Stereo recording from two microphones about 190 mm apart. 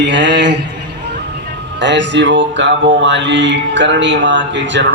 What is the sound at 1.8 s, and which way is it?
Mantra, 70° right (ahead or behind).